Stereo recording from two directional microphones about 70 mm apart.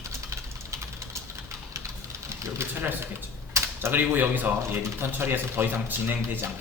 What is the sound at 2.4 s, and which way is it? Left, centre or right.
Speech, right.